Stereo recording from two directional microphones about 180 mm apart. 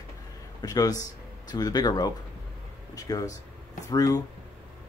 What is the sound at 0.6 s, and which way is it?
Speech, 20° left (ahead or behind).